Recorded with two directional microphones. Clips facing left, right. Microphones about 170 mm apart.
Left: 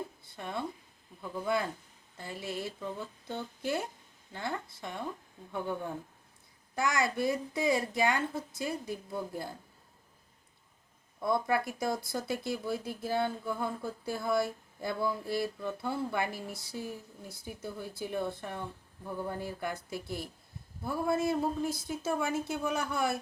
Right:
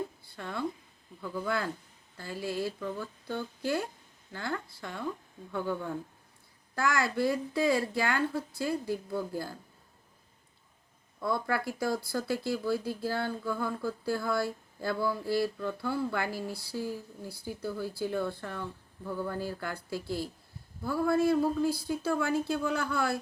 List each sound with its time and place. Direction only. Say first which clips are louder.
0.3 s speech: even; 20° left (ahead or behind)
6.7 s speech: right 1 dB; 20° left (ahead or behind)
11.2 s speech: left 1 dB; 20° left (ahead or behind)